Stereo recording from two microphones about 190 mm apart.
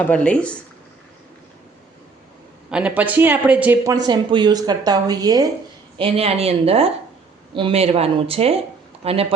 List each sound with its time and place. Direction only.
0.0 s speech: 5° left (ahead or behind)
2.6 s speech: 5° right (ahead or behind)
4.0 s a woman's voice: 25° right (ahead or behind)
6.0 s speech: 30° right (ahead or behind)